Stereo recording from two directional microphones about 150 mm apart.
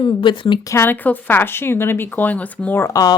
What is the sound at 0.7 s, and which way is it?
Speech, 15° left (ahead or behind).